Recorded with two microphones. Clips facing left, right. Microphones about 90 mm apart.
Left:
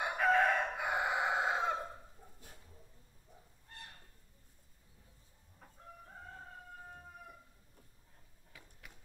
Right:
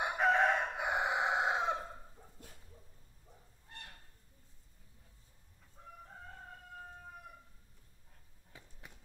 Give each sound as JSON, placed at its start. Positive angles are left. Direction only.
{"t": 0.0, "sound": "chicken", "side_deg": -20}
{"t": 2.4, "sound": "dog", "side_deg": -55}
{"t": 8.5, "sound": "a sound", "side_deg": -25}